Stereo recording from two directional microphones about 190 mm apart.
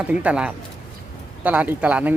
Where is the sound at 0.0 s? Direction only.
5° right (ahead or behind).